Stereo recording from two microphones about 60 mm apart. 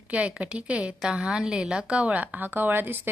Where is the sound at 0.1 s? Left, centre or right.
Right.